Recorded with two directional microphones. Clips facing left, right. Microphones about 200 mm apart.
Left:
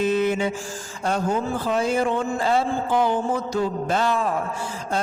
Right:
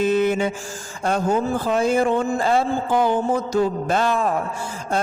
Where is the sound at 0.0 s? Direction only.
50° right (ahead or behind).